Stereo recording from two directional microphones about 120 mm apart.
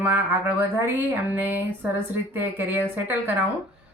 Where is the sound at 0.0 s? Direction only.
20° right (ahead or behind).